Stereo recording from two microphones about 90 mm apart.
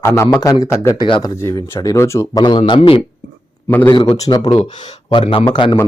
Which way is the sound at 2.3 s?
55° left (ahead or behind).